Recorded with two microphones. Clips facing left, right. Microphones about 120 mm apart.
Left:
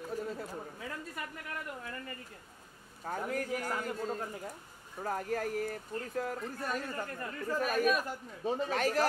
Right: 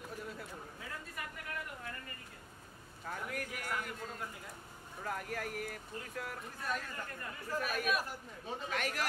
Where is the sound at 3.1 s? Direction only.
40° left (ahead or behind).